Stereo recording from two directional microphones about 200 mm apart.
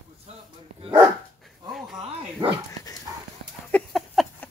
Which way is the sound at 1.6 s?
Centre (ahead or behind).